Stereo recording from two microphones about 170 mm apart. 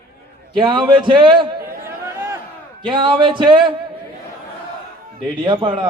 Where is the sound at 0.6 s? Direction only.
30° right (ahead or behind).